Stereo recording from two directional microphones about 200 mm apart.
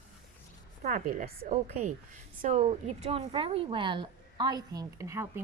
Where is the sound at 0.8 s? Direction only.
40° right (ahead or behind); by 5.4 s 15° right (ahead or behind).